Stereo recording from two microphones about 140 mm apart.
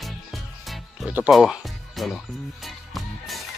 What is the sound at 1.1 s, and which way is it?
Speech, 5° right (ahead or behind).